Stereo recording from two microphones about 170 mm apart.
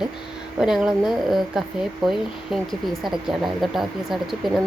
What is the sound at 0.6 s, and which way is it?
Speech, 5° right (ahead or behind).